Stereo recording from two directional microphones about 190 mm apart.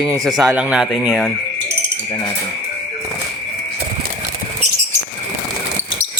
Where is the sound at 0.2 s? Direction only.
Centre (ahead or behind).